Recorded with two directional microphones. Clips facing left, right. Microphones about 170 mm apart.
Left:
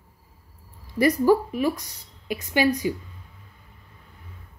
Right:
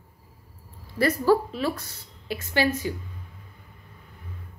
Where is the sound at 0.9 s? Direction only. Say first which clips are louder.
Left 2 dB; 15° left (ahead or behind).